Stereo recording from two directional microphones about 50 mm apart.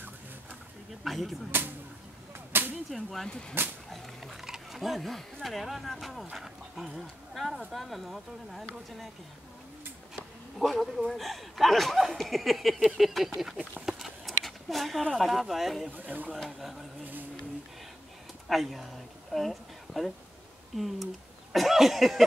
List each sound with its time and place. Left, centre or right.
1.0 s speech: centre
2.5 s whip: right
2.9 s speech: centre
3.6 s speech: right
3.9 s speech: centre
10.6 s speech: centre
13.8 s a sound: centre
15.1 s speech: centre
16.0 s speech: right
16.4 s speech: centre
17.0 s speech: right
18.5 s speech: centre